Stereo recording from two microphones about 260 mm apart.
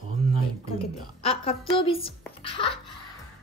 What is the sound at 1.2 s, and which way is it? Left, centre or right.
Speech, left.